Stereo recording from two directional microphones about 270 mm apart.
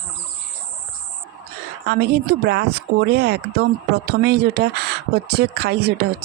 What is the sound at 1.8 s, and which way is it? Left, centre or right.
Speech, right.